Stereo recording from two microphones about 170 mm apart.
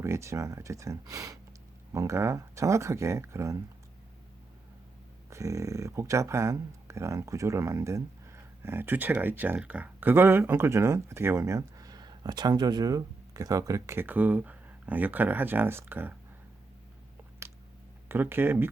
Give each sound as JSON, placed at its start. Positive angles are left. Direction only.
{"t": 0.0, "sound": "speech", "side_deg": -15}
{"t": 5.3, "sound": "speech", "side_deg": -20}
{"t": 18.1, "sound": "speech", "side_deg": -15}